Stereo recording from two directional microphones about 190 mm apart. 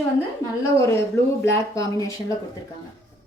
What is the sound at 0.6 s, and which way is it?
A woman's voice, 15° left (ahead or behind).